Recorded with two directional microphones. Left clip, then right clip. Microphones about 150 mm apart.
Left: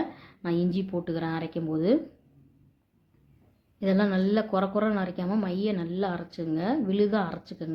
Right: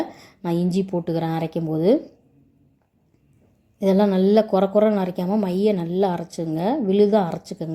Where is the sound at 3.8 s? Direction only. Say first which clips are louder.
Right 8 dB; 35° right (ahead or behind).